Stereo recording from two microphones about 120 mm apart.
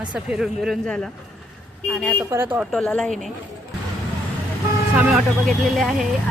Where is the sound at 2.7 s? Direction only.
5° left (ahead or behind).